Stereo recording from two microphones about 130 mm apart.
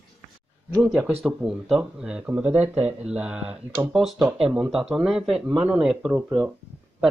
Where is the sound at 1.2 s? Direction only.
5° right (ahead or behind).